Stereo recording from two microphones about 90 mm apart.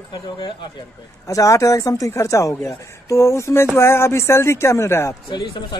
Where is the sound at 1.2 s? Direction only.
35° left (ahead or behind).